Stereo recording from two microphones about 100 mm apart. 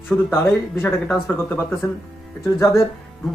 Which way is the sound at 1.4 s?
20° left (ahead or behind).